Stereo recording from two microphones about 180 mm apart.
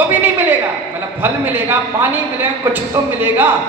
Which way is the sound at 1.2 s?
10° right (ahead or behind).